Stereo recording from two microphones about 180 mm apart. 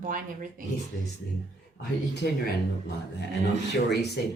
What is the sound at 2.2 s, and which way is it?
Speech, 70° left (ahead or behind).